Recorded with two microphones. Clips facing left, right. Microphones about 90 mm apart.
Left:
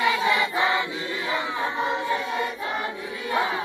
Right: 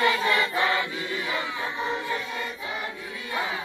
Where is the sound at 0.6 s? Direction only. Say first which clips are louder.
Left 2 dB; 20° left (ahead or behind).